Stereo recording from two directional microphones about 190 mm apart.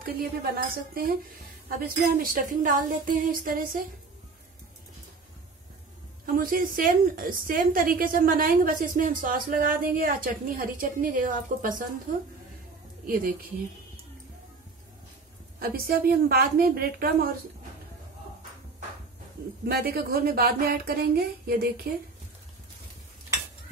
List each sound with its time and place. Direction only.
0.0 s a woman's voice: 50° right (ahead or behind)
6.2 s a woman's voice: 50° right (ahead or behind)
15.6 s a woman's voice: 50° right (ahead or behind)
19.6 s a woman's voice: 55° right (ahead or behind)